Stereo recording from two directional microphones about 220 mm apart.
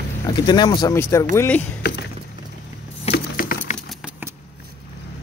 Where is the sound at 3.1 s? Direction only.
40° left (ahead or behind).